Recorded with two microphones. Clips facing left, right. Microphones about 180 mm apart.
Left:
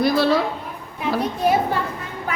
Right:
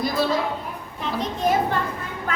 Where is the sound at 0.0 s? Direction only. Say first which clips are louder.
Left 5 dB; 75° left (ahead or behind).